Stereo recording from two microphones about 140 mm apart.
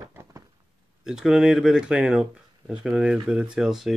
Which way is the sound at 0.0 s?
25° right (ahead or behind).